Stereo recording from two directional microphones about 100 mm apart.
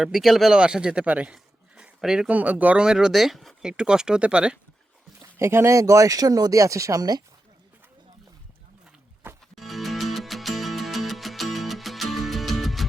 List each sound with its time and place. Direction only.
0.0 s a man's voice: 5° right (ahead or behind)
5.2 s speech: 25° right (ahead or behind)
9.6 s music: centre (ahead or behind)